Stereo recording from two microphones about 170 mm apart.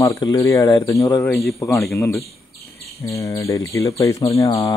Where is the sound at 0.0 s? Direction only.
20° left (ahead or behind).